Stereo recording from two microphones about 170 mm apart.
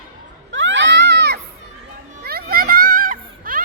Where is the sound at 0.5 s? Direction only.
90° right.